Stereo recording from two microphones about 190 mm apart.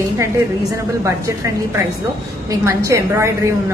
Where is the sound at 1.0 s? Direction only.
15° right (ahead or behind).